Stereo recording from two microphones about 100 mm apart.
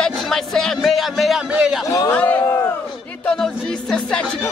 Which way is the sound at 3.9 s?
10° left (ahead or behind).